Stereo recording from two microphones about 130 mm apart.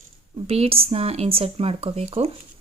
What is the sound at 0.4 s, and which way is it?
Speech, 50° right (ahead or behind).